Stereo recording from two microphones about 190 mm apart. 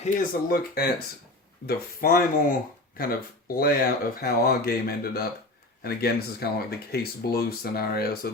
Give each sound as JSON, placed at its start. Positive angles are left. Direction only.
{"t": 0.0, "sound": "speech", "side_deg": 35}
{"t": 0.4, "sound": "speech", "side_deg": 50}